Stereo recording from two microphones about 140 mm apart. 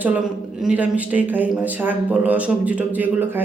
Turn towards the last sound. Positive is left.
turn(degrees=-10)  # may be behind; listen again after turning